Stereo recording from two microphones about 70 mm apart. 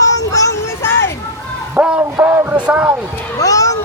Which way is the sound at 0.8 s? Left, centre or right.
Left.